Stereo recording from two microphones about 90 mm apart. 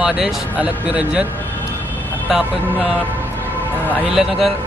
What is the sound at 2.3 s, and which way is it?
Speech, 15° right (ahead or behind).